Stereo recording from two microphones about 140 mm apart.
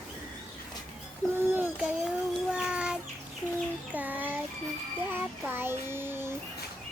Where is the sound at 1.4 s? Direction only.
15° right (ahead or behind).